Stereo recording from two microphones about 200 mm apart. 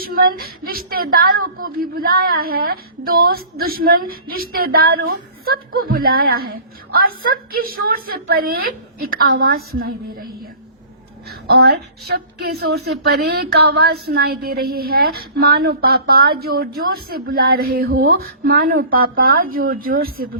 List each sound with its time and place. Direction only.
0.0 s a woman's voice: 50° right (ahead or behind)
11.3 s a woman's voice: 55° right (ahead or behind)